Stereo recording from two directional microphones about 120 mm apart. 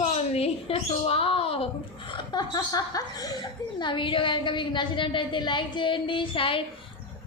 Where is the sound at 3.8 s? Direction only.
45° left (ahead or behind).